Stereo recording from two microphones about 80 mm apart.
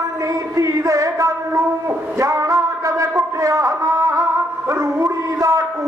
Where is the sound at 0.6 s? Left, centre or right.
Right.